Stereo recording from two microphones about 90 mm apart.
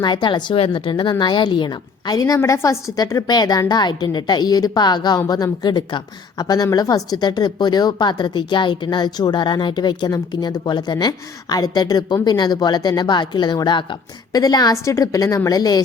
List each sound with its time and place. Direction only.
0.0 s speech: 55° left (ahead or behind)
2.1 s a woman's voice: 40° left (ahead or behind); by 13.8 s 55° left (ahead or behind)
14.3 s a woman's voice: 45° left (ahead or behind)